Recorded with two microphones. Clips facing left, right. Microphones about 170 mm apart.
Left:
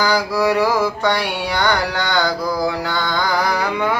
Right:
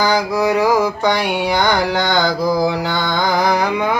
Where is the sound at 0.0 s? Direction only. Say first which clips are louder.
Right 1 dB; 20° right (ahead or behind).